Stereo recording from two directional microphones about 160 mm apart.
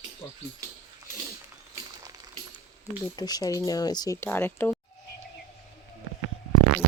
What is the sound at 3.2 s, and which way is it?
Speech, 25° left (ahead or behind).